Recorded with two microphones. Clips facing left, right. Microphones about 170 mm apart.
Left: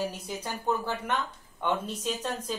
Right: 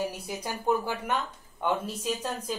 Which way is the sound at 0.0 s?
10° right (ahead or behind).